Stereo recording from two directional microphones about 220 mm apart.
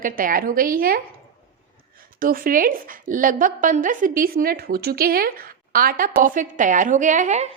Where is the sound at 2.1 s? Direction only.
40° right (ahead or behind).